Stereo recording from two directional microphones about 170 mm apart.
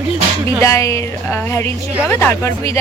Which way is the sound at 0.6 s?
15° left (ahead or behind).